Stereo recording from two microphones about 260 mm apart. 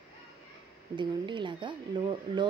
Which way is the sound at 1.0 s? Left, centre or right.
Centre.